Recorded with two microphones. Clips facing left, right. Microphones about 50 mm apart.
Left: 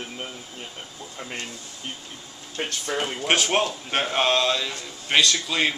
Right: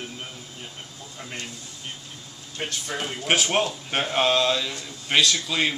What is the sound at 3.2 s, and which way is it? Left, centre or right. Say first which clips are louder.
A man's voice: even; centre.